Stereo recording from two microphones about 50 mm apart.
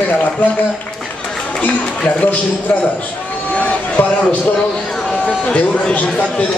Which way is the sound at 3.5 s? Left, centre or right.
Left.